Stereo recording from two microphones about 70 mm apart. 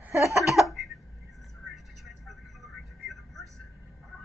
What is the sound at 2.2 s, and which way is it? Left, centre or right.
Vehicle, centre.